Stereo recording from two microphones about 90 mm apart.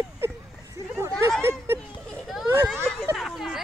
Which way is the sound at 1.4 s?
25° right (ahead or behind).